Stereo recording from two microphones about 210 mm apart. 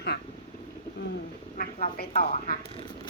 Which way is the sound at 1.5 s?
40° left (ahead or behind).